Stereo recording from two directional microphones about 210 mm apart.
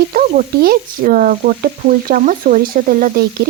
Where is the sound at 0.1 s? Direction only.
40° right (ahead or behind).